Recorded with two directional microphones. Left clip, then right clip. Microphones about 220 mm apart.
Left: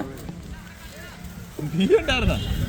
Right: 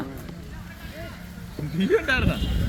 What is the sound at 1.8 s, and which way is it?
Speech, 30° left (ahead or behind).